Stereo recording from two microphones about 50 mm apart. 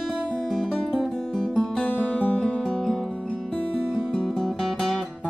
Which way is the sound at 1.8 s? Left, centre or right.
Left.